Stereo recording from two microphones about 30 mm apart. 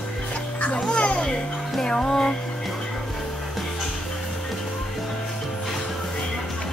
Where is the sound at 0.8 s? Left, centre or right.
Left.